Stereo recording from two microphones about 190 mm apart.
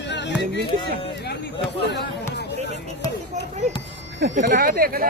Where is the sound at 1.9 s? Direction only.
65° left (ahead or behind).